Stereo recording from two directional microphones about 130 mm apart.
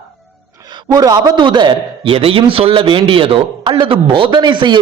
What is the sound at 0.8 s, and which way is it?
A man's voice, 30° right (ahead or behind).